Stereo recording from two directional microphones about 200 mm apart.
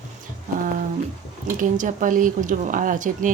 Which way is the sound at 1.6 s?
40° right (ahead or behind).